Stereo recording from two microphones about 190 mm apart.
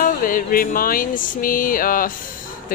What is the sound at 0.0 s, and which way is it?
Speech, 45° left (ahead or behind).